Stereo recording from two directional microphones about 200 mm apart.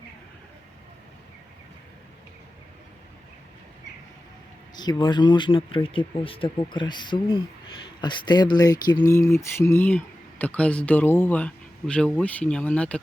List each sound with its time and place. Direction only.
4.7 s speech: 20° left (ahead or behind)